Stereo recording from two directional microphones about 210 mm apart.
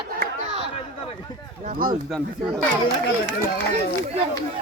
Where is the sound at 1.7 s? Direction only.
40° right (ahead or behind).